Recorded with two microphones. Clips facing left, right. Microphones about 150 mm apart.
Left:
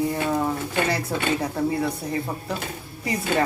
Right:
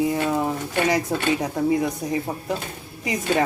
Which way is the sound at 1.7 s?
15° right (ahead or behind).